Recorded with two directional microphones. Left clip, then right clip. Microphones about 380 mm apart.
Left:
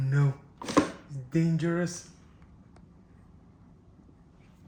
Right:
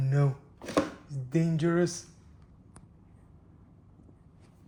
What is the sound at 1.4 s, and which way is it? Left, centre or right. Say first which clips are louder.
Speech: right 1 dB; centre.